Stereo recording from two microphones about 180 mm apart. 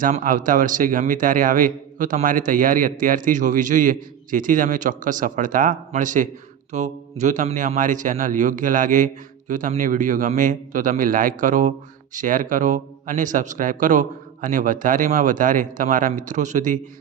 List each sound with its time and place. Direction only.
0.0 s a man's voice: 45° right (ahead or behind)